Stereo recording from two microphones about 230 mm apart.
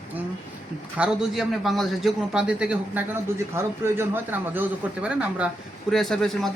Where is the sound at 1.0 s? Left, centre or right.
Centre.